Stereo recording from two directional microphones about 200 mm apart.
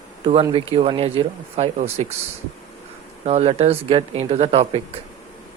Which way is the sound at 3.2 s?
30° right (ahead or behind).